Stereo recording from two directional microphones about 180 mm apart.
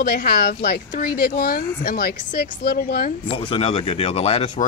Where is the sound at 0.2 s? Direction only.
55° left (ahead or behind).